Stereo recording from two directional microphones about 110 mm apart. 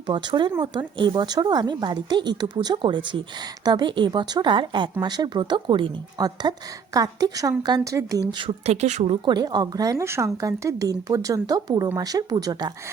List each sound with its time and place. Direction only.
0.1 s a woman's voice: 45° right (ahead or behind)
8.3 s speech: 50° right (ahead or behind)
8.6 s speech: 80° right
9.2 s a woman's voice: 40° right (ahead or behind)